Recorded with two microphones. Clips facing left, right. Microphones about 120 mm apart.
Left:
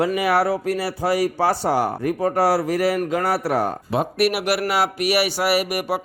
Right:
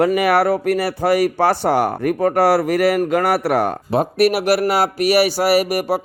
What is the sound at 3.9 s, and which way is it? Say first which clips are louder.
Speech: right 5 dB; 40° right (ahead or behind).